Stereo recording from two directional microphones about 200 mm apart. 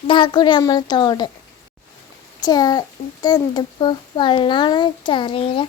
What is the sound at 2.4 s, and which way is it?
A child's voice, 20° left (ahead or behind).